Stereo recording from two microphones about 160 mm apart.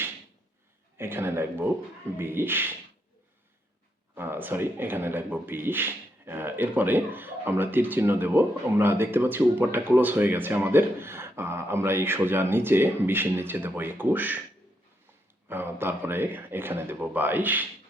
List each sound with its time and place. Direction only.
0.9 s speech: 15° right (ahead or behind)
4.1 s speech: 15° right (ahead or behind)
15.4 s speech: 15° right (ahead or behind)